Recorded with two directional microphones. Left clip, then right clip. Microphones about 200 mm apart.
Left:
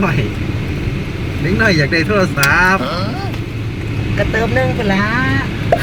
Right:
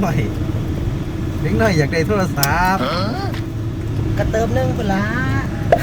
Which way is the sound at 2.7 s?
Centre (ahead or behind).